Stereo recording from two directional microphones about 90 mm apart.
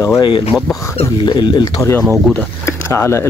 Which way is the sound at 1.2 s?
60° left (ahead or behind).